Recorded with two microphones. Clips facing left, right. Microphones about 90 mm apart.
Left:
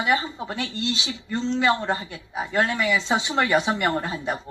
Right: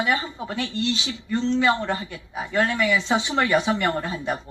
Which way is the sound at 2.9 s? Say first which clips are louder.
Right 1 dB; 20° left (ahead or behind).